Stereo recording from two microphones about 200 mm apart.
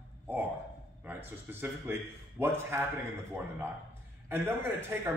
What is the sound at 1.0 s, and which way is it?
A man's voice, 10° right (ahead or behind).